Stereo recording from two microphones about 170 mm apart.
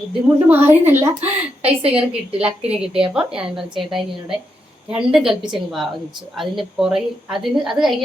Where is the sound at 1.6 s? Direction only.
35° right (ahead or behind).